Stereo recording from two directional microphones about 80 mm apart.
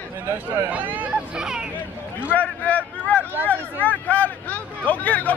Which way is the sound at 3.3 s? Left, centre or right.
Right.